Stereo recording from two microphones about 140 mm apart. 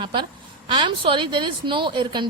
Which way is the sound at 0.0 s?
35° right (ahead or behind).